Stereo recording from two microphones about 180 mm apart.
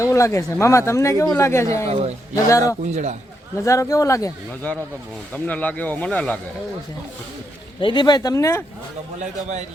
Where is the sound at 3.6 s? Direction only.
15° left (ahead or behind).